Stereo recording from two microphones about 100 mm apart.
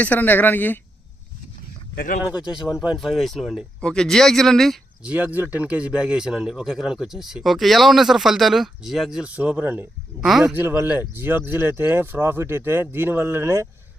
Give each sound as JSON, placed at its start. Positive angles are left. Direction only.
{"t": 0.0, "sound": "speech", "side_deg": 15}
{"t": 2.4, "sound": "a man's voice", "side_deg": -5}
{"t": 5.0, "sound": "a man's voice", "side_deg": -15}
{"t": 10.2, "sound": "a man's voice", "side_deg": 0}
{"t": 10.4, "sound": "speech", "side_deg": -25}